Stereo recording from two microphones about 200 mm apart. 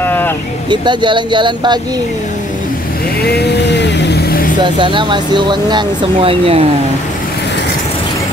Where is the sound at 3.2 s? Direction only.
55° left (ahead or behind).